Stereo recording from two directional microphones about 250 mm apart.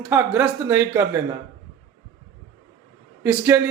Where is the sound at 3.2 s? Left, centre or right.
Centre.